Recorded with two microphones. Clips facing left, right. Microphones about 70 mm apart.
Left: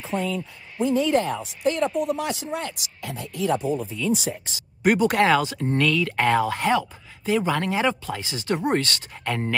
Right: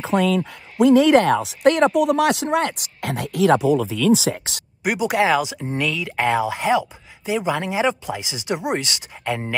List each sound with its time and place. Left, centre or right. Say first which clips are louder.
0.0 s speech: right 8 dB; right
4.8 s speech: even; centre